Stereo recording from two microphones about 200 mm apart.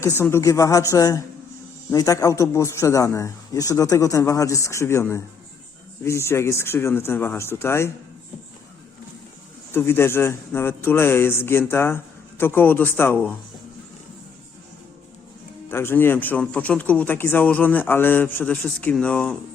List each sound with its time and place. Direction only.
0.0 s a man's voice: 15° left (ahead or behind)
9.7 s a man's voice: 10° left (ahead or behind)
15.7 s a man's voice: 10° left (ahead or behind)